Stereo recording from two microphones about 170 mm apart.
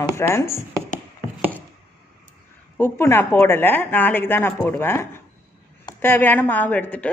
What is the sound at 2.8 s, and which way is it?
A woman's voice, 15° left (ahead or behind).